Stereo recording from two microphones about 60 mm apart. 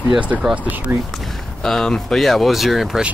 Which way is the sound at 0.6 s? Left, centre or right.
Right.